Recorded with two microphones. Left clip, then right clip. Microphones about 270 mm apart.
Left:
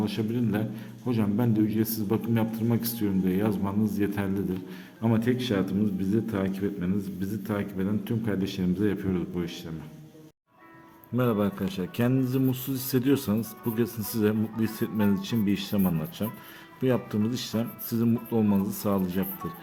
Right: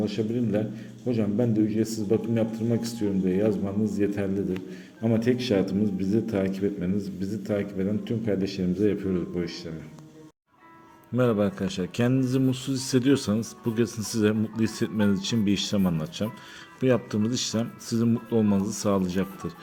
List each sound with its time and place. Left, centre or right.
0.0 s a man's voice: centre
11.2 s a man's voice: centre